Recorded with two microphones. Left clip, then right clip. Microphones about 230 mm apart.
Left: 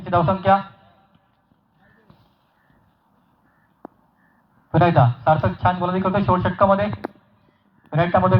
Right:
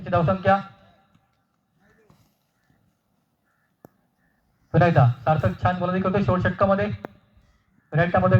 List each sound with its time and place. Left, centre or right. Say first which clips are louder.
0.0 s speech: left 3 dB; right
4.7 s speech: left 3 dB; right